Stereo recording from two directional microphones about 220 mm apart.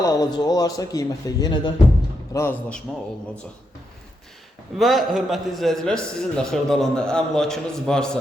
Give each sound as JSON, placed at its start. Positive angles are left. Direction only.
{"t": 0.0, "sound": "a man's voice", "side_deg": 15}
{"t": 4.8, "sound": "a man's voice", "side_deg": 0}